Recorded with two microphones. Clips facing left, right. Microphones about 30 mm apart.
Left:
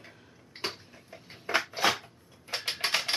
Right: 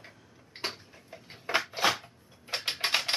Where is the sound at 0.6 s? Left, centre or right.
Centre.